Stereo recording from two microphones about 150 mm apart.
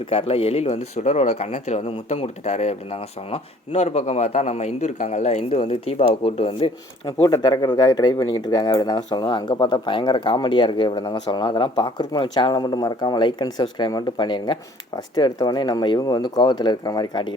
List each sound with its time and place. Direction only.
0.1 s a man's voice: 40° left (ahead or behind)
7.2 s speech: 25° left (ahead or behind)